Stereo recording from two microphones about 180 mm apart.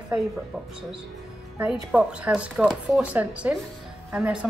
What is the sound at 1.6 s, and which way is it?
Speech, 5° right (ahead or behind).